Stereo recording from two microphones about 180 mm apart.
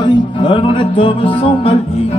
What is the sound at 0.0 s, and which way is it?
Music, 25° left (ahead or behind).